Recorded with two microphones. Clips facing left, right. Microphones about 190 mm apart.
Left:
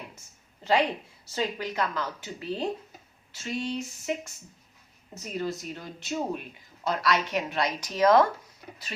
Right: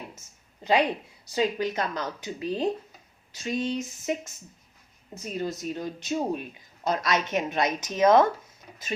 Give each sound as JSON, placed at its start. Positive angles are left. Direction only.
{"t": 1.2, "sound": "a woman's voice", "side_deg": -15}
{"t": 5.4, "sound": "a woman's voice", "side_deg": -20}